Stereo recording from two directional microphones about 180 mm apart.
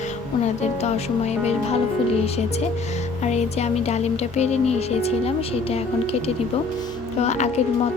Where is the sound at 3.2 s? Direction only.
40° left (ahead or behind).